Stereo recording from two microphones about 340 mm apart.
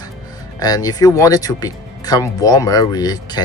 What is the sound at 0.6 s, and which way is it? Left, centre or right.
Speech, centre.